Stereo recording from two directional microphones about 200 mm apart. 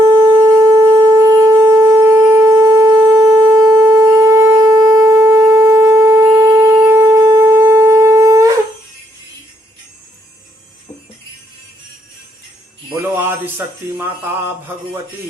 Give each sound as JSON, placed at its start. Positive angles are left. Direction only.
{"t": 0.0, "sound": "wind instrument", "side_deg": -15}
{"t": 12.9, "sound": "music", "side_deg": -10}